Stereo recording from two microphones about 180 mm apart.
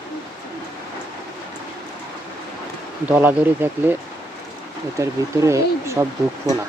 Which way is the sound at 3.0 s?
10° right (ahead or behind).